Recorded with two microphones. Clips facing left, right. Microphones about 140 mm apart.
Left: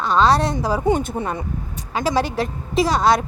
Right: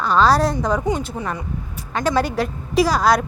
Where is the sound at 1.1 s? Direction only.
25° left (ahead or behind).